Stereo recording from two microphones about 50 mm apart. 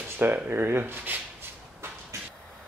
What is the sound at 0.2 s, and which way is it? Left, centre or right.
Speech, right.